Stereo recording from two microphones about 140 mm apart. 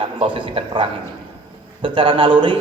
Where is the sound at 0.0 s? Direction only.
35° right (ahead or behind).